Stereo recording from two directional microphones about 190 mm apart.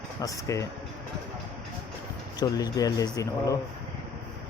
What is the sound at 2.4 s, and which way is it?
Speech, 20° left (ahead or behind).